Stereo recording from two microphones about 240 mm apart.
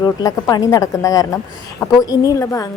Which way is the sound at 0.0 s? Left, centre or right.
Centre.